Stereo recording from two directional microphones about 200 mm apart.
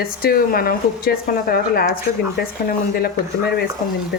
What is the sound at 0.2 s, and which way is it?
Speech, 45° left (ahead or behind).